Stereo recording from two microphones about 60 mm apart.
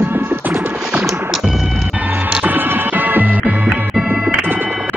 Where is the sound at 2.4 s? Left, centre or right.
Right.